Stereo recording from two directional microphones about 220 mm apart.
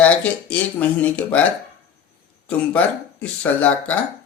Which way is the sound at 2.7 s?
5° left (ahead or behind).